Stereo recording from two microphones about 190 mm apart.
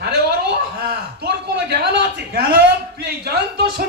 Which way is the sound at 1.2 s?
60° right (ahead or behind).